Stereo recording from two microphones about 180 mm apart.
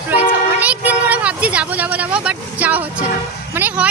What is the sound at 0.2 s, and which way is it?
Vehicle, 10° right (ahead or behind).